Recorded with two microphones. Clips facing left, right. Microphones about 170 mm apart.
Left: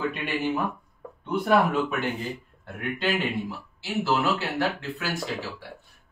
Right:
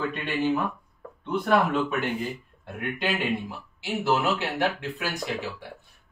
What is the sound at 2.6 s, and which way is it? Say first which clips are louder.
Speech: left 1 dB; 15° right (ahead or behind).